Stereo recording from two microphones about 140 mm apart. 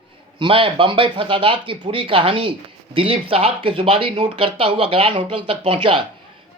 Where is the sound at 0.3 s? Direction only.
35° right (ahead or behind).